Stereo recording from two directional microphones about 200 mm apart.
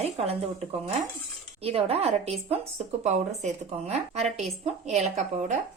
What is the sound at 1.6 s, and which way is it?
A woman's voice, 30° right (ahead or behind).